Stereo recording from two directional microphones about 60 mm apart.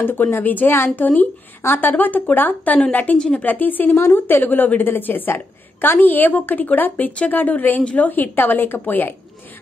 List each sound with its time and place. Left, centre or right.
0.0 s a woman's voice: left
3.2 s a woman's voice: centre
3.4 s a woman's voice: left